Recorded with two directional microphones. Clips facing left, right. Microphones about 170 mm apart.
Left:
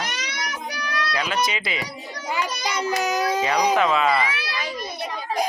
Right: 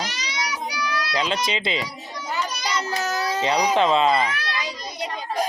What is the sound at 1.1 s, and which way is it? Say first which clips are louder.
Speech: even; 25° right (ahead or behind).